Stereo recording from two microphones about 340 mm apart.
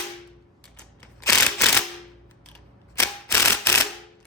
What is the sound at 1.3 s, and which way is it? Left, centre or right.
Ratchet, centre.